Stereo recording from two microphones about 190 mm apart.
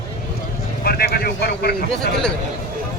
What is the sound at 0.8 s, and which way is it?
Speech, 55° left (ahead or behind).